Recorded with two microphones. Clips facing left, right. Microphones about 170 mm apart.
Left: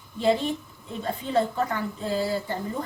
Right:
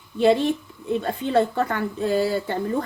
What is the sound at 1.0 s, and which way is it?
A woman's voice, 70° right (ahead or behind).